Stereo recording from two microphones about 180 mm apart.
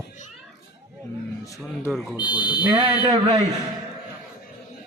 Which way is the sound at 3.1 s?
30° right (ahead or behind).